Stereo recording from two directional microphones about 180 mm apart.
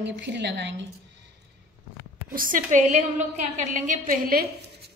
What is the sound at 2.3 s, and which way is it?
A woman's voice, 50° right (ahead or behind).